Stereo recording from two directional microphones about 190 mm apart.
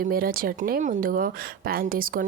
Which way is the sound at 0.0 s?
50° right (ahead or behind).